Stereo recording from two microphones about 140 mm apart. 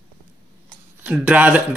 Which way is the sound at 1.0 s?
10° right (ahead or behind).